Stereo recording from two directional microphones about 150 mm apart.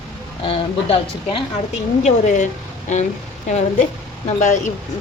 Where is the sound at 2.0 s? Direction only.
55° left (ahead or behind).